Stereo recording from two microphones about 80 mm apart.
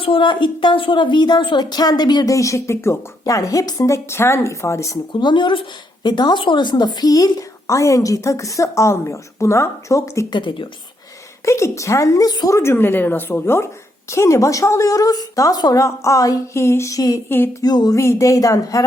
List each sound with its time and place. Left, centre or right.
0.1 s a woman's voice: left
2.3 s a woman's voice: left
5.2 s a woman's voice: left
10.2 s speech: left
11.4 s a woman's voice: left
12.7 s a woman's voice: left
17.2 s speech: left
17.5 s a sound: left
17.9 s a woman's voice: left